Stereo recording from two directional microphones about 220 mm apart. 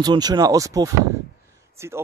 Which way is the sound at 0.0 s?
20° right (ahead or behind).